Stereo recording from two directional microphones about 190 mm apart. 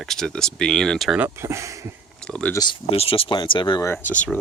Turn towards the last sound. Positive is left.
turn(degrees=10)  # may be behind; listen again after turning